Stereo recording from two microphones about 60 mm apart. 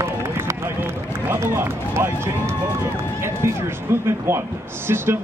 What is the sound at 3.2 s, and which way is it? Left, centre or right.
A man's voice, right.